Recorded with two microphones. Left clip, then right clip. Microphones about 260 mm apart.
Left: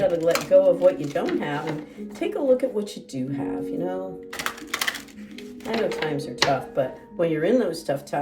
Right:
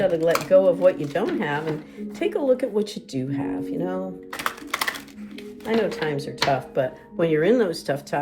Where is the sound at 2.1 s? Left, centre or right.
Right.